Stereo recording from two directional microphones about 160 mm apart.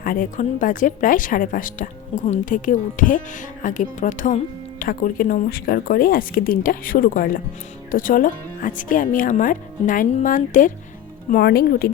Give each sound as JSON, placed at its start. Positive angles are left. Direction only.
{"t": 0.0, "sound": "speech", "side_deg": 60}
{"t": 11.3, "sound": "speech", "side_deg": 75}